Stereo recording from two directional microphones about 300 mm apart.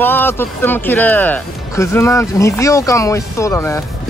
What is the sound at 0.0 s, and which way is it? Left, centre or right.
Speech, centre.